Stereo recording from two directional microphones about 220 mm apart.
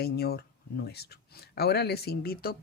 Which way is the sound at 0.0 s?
45° left (ahead or behind).